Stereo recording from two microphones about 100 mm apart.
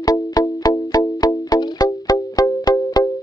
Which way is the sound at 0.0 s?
40° left (ahead or behind).